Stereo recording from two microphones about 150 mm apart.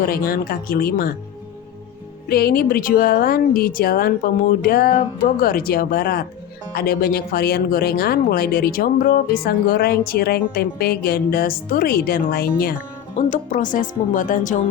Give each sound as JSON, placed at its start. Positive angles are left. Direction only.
{"t": 0.0, "sound": "speech", "side_deg": 90}
{"t": 2.3, "sound": "speech", "side_deg": 90}
{"t": 13.1, "sound": "speech", "side_deg": 60}